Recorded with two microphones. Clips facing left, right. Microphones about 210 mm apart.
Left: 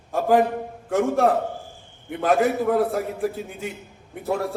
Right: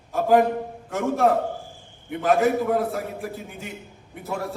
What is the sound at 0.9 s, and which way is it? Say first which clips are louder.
A man's voice: left 2 dB; 50° left (ahead or behind).